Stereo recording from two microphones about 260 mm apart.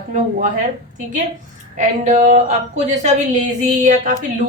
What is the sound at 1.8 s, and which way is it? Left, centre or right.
A woman's voice, right.